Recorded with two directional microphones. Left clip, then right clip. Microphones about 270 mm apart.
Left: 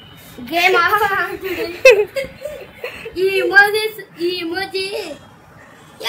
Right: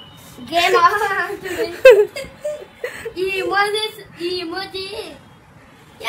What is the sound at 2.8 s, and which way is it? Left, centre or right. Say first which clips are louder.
Chuckle: right 1 dB; centre.